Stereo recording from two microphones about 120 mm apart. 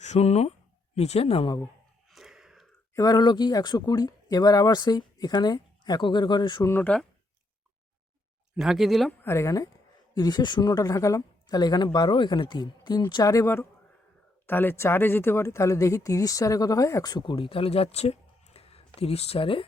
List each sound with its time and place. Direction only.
0.0 s speech: 70° left (ahead or behind); by 1.5 s 55° left (ahead or behind)
2.0 s a sound: centre (ahead or behind)
2.9 s speech: 30° left (ahead or behind)
6.7 s speech: 20° left (ahead or behind)
8.5 s speech: centre (ahead or behind)
9.2 s speech: 25° left (ahead or behind); by 19.6 s 50° left (ahead or behind)